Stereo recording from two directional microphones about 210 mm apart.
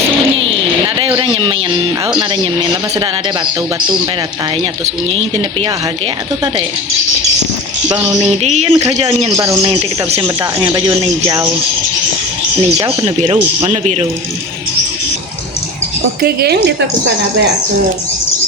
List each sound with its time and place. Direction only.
0.5 s a sound: 25° right (ahead or behind)
2.1 s speech: 20° right (ahead or behind)
5.0 s speech: 25° right (ahead or behind)
7.9 s speech: 20° right (ahead or behind)
13.1 s speech: 30° right (ahead or behind)
16.2 s a woman's voice: 50° right (ahead or behind)